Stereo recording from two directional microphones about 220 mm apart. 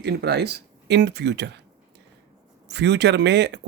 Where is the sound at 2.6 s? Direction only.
50° right (ahead or behind).